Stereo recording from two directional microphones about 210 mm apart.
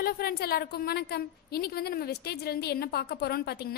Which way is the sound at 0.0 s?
45° left (ahead or behind).